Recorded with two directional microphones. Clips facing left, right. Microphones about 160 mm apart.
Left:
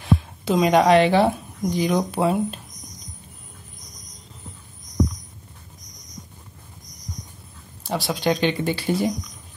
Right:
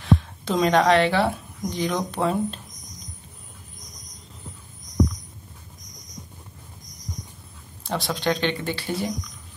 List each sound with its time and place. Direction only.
0.0 s speech: 10° left (ahead or behind)
7.8 s speech: 5° left (ahead or behind)